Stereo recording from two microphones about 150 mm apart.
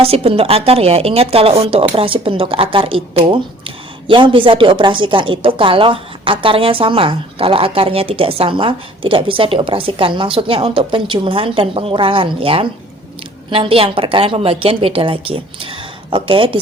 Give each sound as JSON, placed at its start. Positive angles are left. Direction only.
{"t": 0.0, "sound": "a woman's voice", "side_deg": -40}